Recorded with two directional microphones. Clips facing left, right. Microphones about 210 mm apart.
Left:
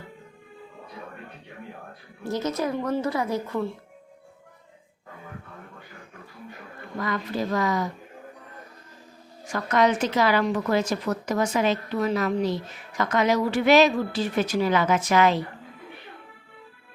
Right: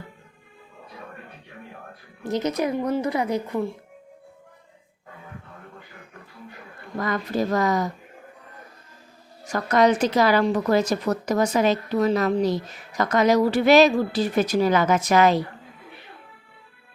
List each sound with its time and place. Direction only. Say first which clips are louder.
2.2 s a woman's voice: right 3 dB; 20° right (ahead or behind)
7.0 s speech: right 3 dB; 45° right (ahead or behind)
9.5 s a woman's voice: right 3 dB; 40° right (ahead or behind)